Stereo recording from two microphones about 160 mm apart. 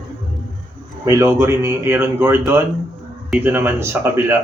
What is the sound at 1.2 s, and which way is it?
Speech, 15° right (ahead or behind).